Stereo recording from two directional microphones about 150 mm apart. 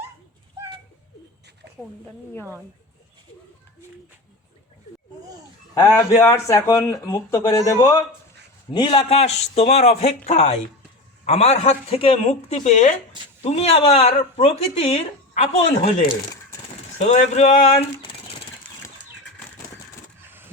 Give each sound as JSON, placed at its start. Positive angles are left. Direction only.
{"t": 5.7, "sound": "speech", "side_deg": 20}
{"t": 8.7, "sound": "speech", "side_deg": 30}
{"t": 13.4, "sound": "speech", "side_deg": 45}
{"t": 17.0, "sound": "speech", "side_deg": 50}
{"t": 20.2, "sound": "a sound", "side_deg": -15}